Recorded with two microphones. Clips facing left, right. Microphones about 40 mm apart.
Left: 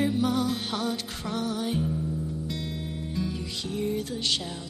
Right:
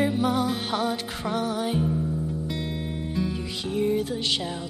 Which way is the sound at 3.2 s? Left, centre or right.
Centre.